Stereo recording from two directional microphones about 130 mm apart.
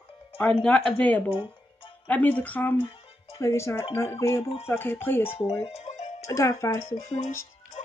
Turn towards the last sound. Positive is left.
turn(degrees=60)  # may be behind; listen again after turning